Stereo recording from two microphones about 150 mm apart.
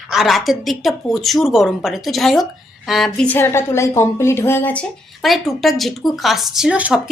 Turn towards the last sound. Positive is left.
turn(degrees=-10)  # may be behind; listen again after turning